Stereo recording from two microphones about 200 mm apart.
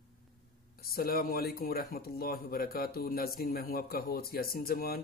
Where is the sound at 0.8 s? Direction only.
50° left (ahead or behind).